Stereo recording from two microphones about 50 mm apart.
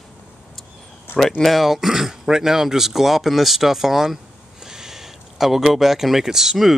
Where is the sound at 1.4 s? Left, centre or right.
Centre.